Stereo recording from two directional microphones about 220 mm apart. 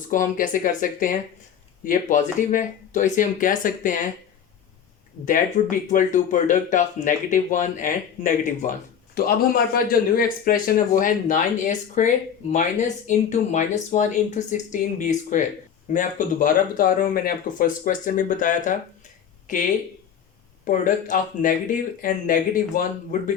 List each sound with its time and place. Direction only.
0.1 s speech: 40° left (ahead or behind)
5.6 s a man's voice: 35° left (ahead or behind)
20.7 s speech: 35° left (ahead or behind)